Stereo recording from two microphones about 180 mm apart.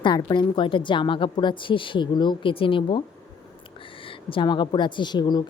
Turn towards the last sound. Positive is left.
turn(degrees=25)  # may be behind; listen again after turning